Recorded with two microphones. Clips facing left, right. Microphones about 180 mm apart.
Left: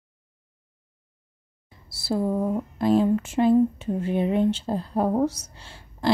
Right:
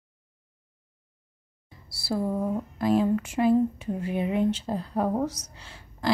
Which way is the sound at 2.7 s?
25° left (ahead or behind).